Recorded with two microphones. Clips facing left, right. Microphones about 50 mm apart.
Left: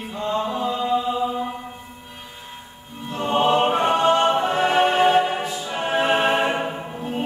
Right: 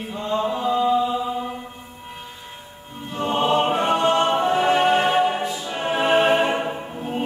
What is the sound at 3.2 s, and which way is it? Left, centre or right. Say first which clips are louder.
Choir: left 1 dB; centre.